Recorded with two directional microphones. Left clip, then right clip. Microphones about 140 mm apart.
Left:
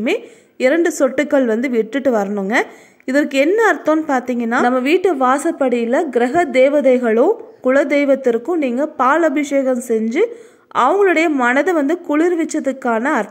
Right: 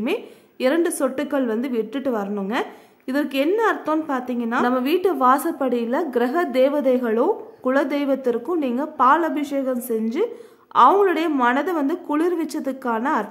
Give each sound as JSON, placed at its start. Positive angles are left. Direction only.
{"t": 0.0, "sound": "a woman's voice", "side_deg": 25}
{"t": 4.7, "sound": "a woman's voice", "side_deg": 20}